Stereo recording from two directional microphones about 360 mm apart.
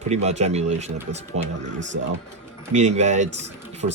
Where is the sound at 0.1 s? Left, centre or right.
Centre.